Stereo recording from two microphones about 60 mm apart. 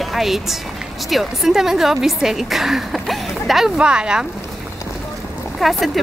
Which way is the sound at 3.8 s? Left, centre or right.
Centre.